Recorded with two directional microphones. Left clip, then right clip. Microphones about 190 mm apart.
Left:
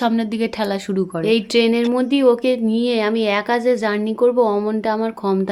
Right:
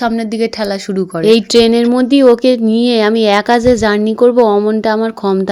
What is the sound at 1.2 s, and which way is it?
Speech, 35° right (ahead or behind).